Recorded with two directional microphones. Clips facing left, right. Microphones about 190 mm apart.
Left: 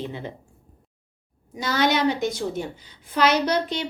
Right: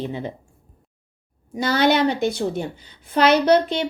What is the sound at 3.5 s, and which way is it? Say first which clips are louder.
Speech: right 7 dB; 60° right (ahead or behind).